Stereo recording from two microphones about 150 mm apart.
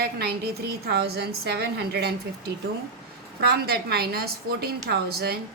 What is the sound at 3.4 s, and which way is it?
A woman's voice, 90° right.